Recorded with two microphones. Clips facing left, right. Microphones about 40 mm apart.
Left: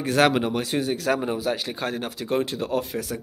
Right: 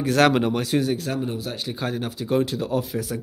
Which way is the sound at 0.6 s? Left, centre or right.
Left.